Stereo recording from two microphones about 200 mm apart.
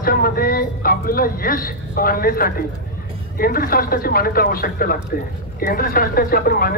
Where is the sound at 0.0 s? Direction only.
45° left (ahead or behind).